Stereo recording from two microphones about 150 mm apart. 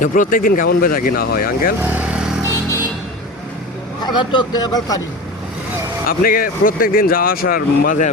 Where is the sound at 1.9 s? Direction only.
10° right (ahead or behind).